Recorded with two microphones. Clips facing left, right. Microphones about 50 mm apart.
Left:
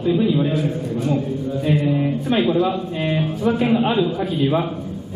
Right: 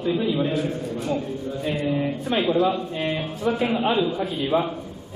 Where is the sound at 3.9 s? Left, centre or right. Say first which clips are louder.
Left 3 dB; left.